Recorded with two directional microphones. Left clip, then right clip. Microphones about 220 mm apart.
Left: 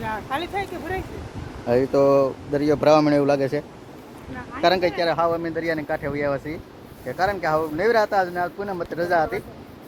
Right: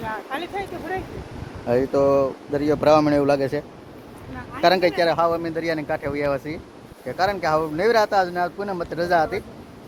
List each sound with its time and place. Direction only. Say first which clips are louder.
0.1 s speech: left 3 dB; 30° left (ahead or behind)
1.6 s speech: left 1 dB; 5° left (ahead or behind)
5.1 s speech: right 1 dB; centre (ahead or behind)